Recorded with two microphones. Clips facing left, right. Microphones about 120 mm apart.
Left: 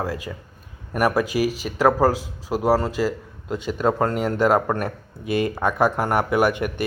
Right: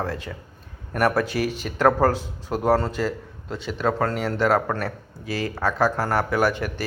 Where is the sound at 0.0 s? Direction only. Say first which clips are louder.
Left 1 dB; 10° left (ahead or behind).